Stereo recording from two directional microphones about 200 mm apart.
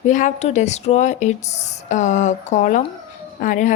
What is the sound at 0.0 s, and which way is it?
A woman's voice, 40° left (ahead or behind).